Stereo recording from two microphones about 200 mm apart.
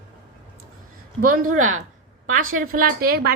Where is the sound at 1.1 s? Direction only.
45° right (ahead or behind).